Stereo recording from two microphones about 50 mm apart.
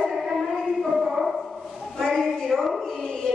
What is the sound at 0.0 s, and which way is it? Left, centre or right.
Music, centre.